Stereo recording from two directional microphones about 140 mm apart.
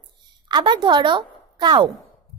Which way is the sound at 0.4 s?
35° right (ahead or behind).